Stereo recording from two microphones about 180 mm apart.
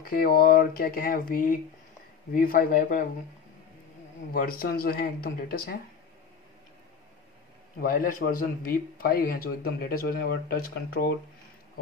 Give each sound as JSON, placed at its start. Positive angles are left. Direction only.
{"t": 0.0, "sound": "speech", "side_deg": 55}
{"t": 4.3, "sound": "speech", "side_deg": 55}
{"t": 7.8, "sound": "speech", "side_deg": 50}